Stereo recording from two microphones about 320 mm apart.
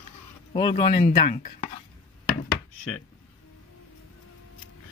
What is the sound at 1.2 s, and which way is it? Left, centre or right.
Speech, left.